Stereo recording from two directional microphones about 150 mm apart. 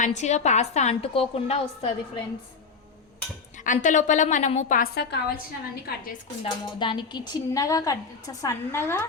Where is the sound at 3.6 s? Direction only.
55° left (ahead or behind); by 5.4 s 90° left.